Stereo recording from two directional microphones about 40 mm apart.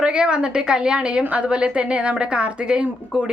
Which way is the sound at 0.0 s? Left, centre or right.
Right.